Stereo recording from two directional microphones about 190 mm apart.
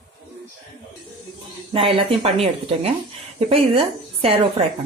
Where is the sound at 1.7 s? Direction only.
25° right (ahead or behind).